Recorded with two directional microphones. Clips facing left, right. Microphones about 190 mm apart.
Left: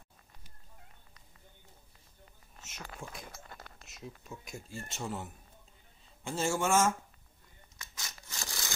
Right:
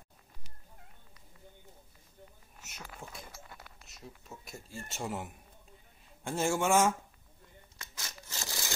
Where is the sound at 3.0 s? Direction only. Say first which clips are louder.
Left 2 dB; 20° right (ahead or behind).